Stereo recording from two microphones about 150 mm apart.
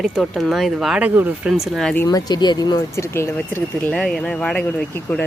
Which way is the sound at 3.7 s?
5° left (ahead or behind).